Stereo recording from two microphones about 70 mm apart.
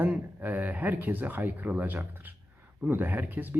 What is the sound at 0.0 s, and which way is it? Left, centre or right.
Speech, right.